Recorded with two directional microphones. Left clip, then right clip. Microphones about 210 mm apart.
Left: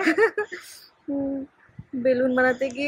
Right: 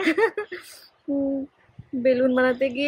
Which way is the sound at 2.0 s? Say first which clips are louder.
Right 1 dB; 25° right (ahead or behind).